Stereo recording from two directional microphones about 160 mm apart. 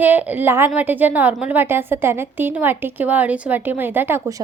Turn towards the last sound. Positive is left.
turn(degrees=-15)  # may be behind; listen again after turning